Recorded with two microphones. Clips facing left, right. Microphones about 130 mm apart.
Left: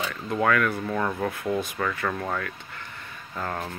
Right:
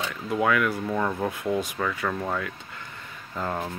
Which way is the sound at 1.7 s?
5° right (ahead or behind).